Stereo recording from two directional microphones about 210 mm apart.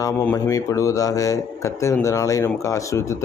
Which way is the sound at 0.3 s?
15° left (ahead or behind).